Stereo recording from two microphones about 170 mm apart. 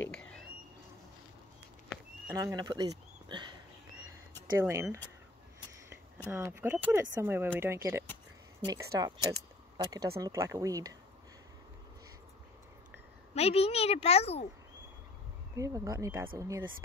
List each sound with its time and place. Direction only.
0.1 s a sound: 5° left (ahead or behind)
2.2 s speech: 20° right (ahead or behind)
4.6 s speech: 15° right (ahead or behind)
6.3 s speech: 15° right (ahead or behind)
13.3 s a woman's voice: 35° left (ahead or behind)
15.5 s speech: 20° right (ahead or behind)